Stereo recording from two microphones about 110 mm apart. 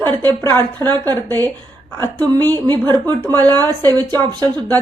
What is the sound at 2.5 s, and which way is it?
Speech, 40° right (ahead or behind).